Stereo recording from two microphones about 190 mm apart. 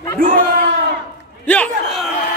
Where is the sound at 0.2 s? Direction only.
50° right (ahead or behind).